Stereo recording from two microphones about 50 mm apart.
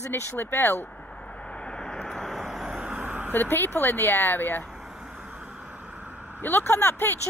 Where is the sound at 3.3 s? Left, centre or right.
Left.